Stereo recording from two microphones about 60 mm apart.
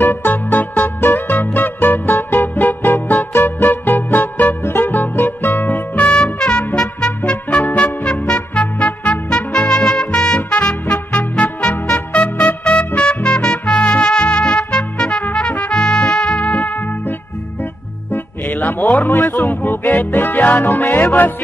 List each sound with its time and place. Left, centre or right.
0.0 s music: left
1.0 s music: left
4.6 s music: left
5.6 s music: left
6.2 s music: centre
9.7 s music: centre
10.9 s music: left
18.8 s a sound: left
19.1 s music: left